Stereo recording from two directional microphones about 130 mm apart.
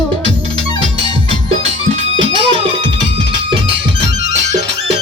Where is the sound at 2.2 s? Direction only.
40° right (ahead or behind).